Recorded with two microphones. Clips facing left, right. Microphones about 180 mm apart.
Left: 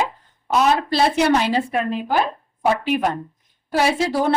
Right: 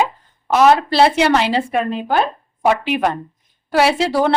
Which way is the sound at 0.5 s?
75° right (ahead or behind).